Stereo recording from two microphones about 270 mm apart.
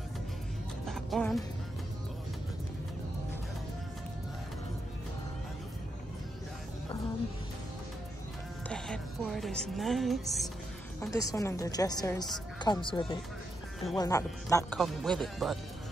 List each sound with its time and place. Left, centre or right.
0.8 s music: centre
8.6 s music: centre
11.0 s a woman's voice: centre